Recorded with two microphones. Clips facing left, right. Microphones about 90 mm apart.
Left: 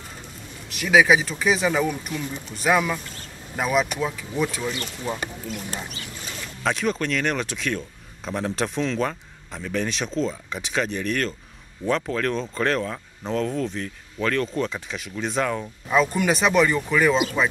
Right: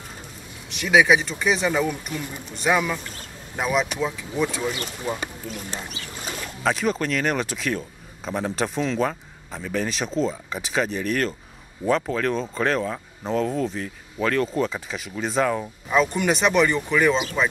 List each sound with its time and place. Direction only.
0.7 s speech: centre (ahead or behind)